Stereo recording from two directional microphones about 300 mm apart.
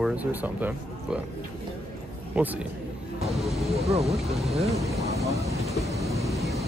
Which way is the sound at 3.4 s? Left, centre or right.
Centre.